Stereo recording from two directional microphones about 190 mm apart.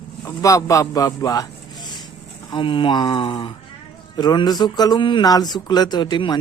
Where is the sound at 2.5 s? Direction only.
25° left (ahead or behind).